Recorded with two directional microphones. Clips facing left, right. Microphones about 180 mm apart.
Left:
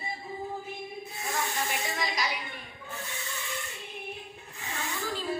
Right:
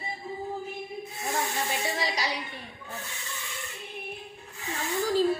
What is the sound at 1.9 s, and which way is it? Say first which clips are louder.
Music: right 2 dB; 35° right (ahead or behind).